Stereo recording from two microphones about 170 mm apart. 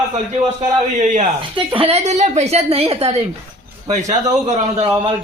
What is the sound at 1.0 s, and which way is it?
Speech, 45° right (ahead or behind).